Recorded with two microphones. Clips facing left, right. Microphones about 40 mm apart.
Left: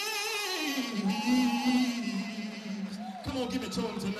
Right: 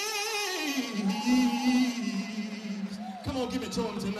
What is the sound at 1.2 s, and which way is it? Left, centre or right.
Music, left.